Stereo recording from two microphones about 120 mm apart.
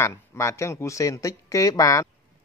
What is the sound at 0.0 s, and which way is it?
Speech, 20° left (ahead or behind).